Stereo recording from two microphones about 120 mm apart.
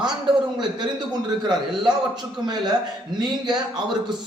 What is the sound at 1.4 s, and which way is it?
A man's voice, 40° right (ahead or behind).